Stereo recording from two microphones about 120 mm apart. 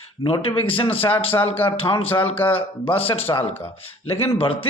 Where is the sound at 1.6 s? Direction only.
15° left (ahead or behind).